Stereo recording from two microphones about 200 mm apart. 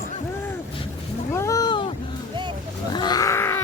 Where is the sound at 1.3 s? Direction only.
15° left (ahead or behind).